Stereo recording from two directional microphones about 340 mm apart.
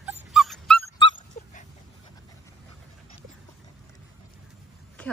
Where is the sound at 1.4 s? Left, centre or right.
Left.